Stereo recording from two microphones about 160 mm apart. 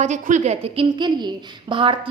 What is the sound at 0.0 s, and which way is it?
A woman's voice, 50° right (ahead or behind).